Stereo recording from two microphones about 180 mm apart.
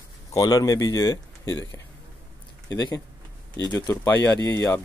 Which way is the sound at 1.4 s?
90° left.